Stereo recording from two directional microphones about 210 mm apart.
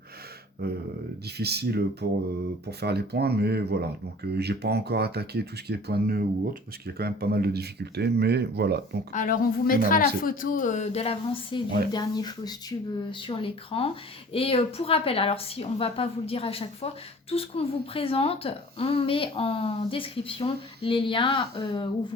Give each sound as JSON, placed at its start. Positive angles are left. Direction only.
{"t": 0.6, "sound": "speech", "side_deg": -50}
{"t": 9.1, "sound": "a woman's voice", "side_deg": 40}